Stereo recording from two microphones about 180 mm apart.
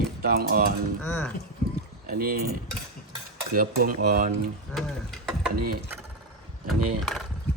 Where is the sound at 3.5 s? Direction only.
55° right (ahead or behind).